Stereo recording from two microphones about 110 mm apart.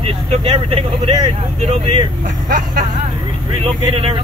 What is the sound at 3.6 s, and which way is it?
Speech, 55° right (ahead or behind).